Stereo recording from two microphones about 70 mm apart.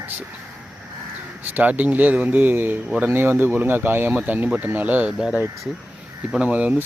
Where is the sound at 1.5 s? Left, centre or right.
Right.